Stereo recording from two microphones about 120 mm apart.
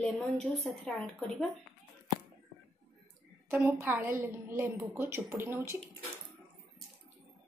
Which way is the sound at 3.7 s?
20° right (ahead or behind).